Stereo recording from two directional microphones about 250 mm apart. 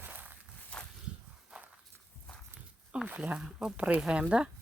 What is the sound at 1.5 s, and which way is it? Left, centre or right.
Walk, centre.